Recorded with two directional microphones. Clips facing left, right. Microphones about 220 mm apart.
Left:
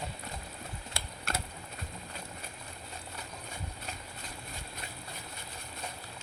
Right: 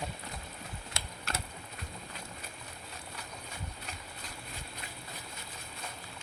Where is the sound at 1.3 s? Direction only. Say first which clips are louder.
Left 2 dB; 50° left (ahead or behind).